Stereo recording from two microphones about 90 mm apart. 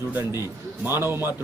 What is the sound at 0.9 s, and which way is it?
Speech, 30° right (ahead or behind).